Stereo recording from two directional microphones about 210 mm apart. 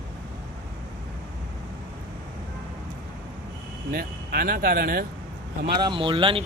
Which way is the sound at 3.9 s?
45° right (ahead or behind).